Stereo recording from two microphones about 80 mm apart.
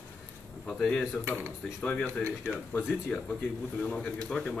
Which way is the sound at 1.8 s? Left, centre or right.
Centre.